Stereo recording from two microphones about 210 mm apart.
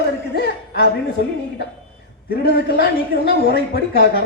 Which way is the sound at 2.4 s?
50° left (ahead or behind).